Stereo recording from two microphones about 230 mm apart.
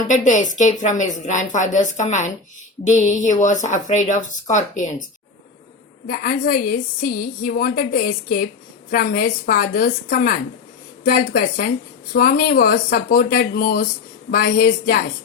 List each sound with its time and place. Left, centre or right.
0.1 s a woman's voice: left
6.1 s a woman's voice: left